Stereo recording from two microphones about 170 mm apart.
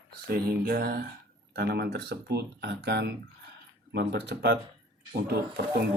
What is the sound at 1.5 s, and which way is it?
Speech, 70° right (ahead or behind).